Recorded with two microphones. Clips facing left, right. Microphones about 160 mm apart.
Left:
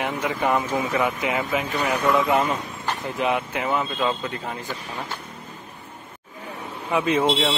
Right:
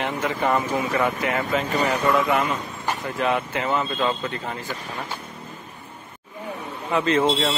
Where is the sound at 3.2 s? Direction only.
10° left (ahead or behind).